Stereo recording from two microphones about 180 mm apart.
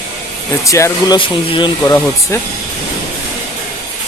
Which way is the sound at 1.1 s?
30° left (ahead or behind).